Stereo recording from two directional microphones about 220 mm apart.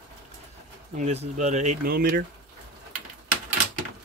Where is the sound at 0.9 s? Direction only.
30° right (ahead or behind).